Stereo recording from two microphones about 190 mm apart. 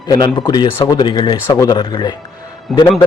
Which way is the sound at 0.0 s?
20° left (ahead or behind).